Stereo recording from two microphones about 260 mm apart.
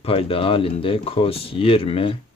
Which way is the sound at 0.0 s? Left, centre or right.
Left.